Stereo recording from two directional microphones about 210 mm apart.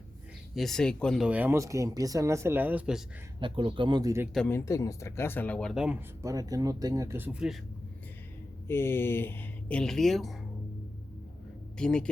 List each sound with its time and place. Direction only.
0.5 s speech: centre (ahead or behind)
3.4 s speech: 25° right (ahead or behind)
4.4 s speech: 10° left (ahead or behind)
6.2 s speech: 15° right (ahead or behind)
8.6 s speech: 10° left (ahead or behind)
11.8 s speech: 5° left (ahead or behind)